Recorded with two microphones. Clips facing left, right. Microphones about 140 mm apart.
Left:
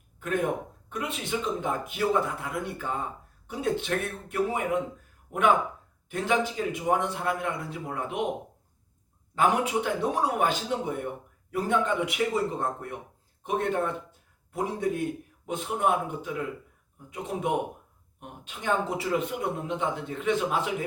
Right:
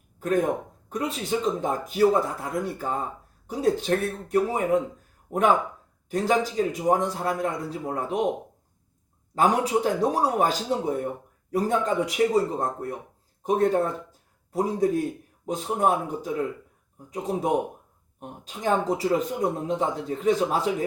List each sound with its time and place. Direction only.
0.2 s speech: 35° right (ahead or behind)
9.3 s speech: 40° right (ahead or behind)